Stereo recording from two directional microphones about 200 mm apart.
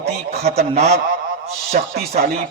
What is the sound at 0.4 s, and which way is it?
Speech, 30° right (ahead or behind).